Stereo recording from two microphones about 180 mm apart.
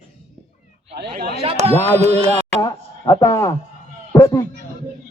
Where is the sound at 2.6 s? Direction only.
20° left (ahead or behind).